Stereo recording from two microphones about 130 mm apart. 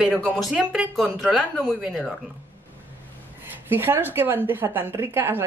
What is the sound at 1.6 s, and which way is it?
Speech, 5° left (ahead or behind).